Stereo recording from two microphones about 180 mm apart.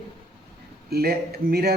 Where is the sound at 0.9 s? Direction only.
60° right (ahead or behind).